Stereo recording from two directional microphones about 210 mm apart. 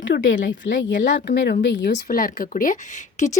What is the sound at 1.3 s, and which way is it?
A woman's voice, 60° left (ahead or behind).